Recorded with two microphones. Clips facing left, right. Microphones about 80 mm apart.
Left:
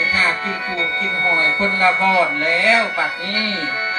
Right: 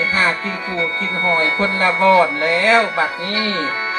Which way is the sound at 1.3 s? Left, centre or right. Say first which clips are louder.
Right 2 dB; right.